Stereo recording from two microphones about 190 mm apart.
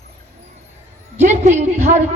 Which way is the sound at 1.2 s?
40° right (ahead or behind).